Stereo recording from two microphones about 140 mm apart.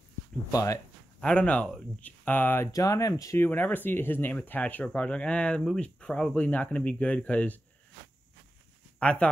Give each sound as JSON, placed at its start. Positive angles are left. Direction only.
{"t": 0.5, "sound": "speech", "side_deg": 25}
{"t": 1.2, "sound": "speech", "side_deg": 10}
{"t": 9.0, "sound": "speech", "side_deg": 10}